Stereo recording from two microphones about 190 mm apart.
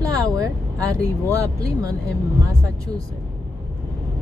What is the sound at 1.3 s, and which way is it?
Speech, 15° right (ahead or behind).